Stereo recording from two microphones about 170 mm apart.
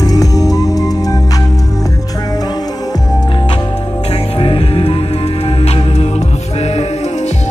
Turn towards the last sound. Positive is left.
turn(degrees=40)  # may be behind; listen again after turning